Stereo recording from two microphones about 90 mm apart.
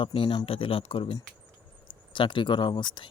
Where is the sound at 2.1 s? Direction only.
65° left (ahead or behind).